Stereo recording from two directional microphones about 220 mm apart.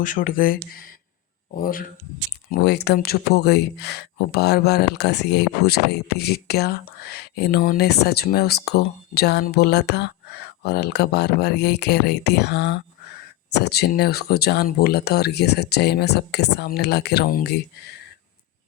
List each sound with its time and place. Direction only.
0.0 s speech: 35° left (ahead or behind)